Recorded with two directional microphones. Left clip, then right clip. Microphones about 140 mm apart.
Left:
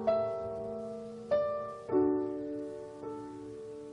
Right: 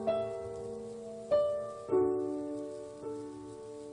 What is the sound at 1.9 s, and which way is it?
Music, 5° right (ahead or behind).